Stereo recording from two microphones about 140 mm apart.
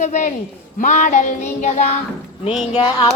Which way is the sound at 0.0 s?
60° left (ahead or behind).